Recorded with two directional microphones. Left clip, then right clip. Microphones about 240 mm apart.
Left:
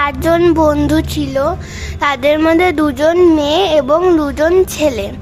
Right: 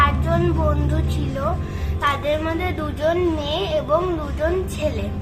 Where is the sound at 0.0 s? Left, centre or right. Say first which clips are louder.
Left 8 dB; left.